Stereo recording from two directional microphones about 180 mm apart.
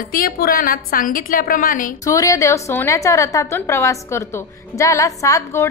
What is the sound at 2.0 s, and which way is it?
A woman's voice, 20° left (ahead or behind).